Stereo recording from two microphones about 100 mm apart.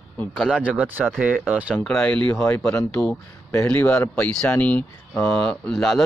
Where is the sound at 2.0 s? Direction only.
10° left (ahead or behind).